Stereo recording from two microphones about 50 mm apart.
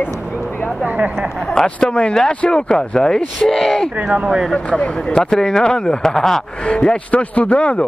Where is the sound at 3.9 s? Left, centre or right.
Right.